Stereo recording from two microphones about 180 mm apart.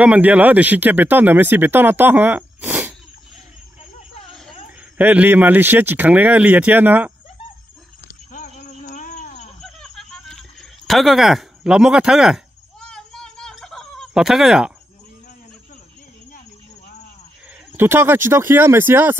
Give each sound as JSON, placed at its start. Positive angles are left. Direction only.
{"t": 0.0, "sound": "speech", "side_deg": -10}
{"t": 4.6, "sound": "speech", "side_deg": -10}
{"t": 8.3, "sound": "a sound", "side_deg": 40}
{"t": 9.6, "sound": "a sound", "side_deg": 0}
{"t": 12.9, "sound": "fowl", "side_deg": 5}
{"t": 17.7, "sound": "speech", "side_deg": -15}